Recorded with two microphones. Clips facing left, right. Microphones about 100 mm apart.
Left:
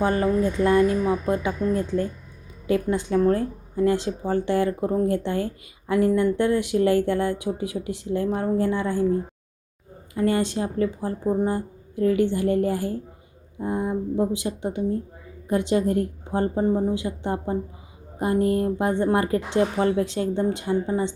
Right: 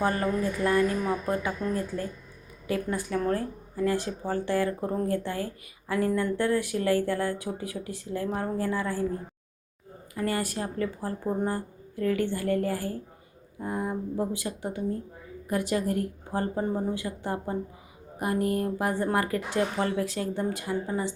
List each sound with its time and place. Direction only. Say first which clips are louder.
0.0 s speech: left 5 dB; 25° left (ahead or behind)
10.2 s speech: left 7 dB; 25° left (ahead or behind)